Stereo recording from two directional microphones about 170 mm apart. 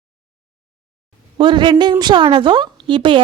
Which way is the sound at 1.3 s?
30° right (ahead or behind).